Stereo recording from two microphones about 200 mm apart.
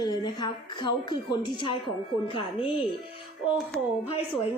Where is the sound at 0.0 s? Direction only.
20° left (ahead or behind).